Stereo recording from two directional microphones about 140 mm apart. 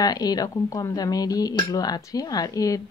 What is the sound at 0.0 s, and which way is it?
Speech, 25° left (ahead or behind).